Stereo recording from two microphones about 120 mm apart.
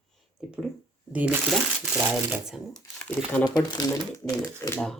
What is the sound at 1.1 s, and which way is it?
Speech, 15° right (ahead or behind).